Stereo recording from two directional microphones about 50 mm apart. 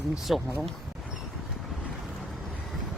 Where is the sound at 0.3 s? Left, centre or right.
Centre.